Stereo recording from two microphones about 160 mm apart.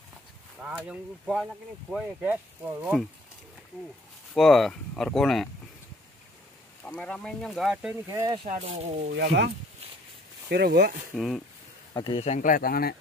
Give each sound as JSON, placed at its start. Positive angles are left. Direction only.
{"t": 0.6, "sound": "speech", "side_deg": -5}
{"t": 4.3, "sound": "speech", "side_deg": 0}
{"t": 6.8, "sound": "speech", "side_deg": 10}
{"t": 8.1, "sound": "speech", "side_deg": -25}
{"t": 8.6, "sound": "speech", "side_deg": -40}
{"t": 9.1, "sound": "speech", "side_deg": -90}
{"t": 10.5, "sound": "speech", "side_deg": -80}
{"t": 11.1, "sound": "speech", "side_deg": 0}
{"t": 11.9, "sound": "speech", "side_deg": 30}
{"t": 12.4, "sound": "speech", "side_deg": 55}